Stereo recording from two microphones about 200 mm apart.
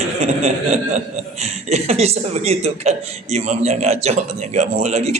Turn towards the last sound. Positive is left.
turn(degrees=-35)  # may be behind; listen again after turning